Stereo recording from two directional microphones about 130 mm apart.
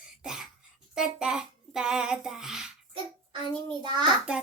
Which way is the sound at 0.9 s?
5° right (ahead or behind).